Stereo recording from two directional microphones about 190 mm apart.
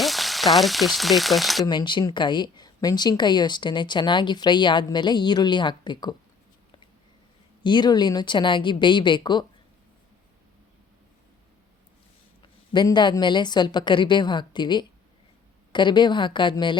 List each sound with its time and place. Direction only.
0.0 s frying: centre (ahead or behind)
1.6 s speech: 25° left (ahead or behind)
7.6 s speech: 25° left (ahead or behind)
12.4 s speech: 25° left (ahead or behind)